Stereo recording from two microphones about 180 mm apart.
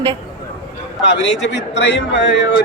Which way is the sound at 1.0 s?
80° left.